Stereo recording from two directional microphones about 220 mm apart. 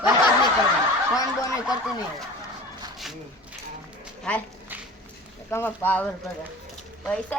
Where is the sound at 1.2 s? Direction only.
15° left (ahead or behind).